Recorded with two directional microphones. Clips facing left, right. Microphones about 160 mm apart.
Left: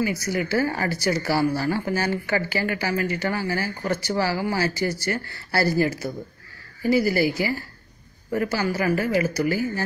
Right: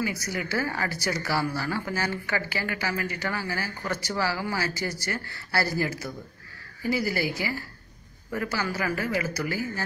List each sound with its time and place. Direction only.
0.0 s speech: 25° left (ahead or behind)